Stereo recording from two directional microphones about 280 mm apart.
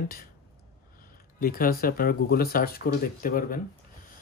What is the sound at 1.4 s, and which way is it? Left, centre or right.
Speech, left.